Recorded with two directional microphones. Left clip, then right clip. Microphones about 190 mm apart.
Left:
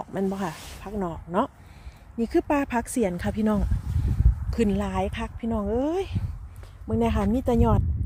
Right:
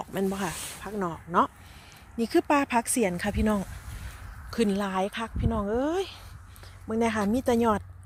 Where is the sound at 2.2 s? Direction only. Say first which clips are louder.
Even; 5° left (ahead or behind).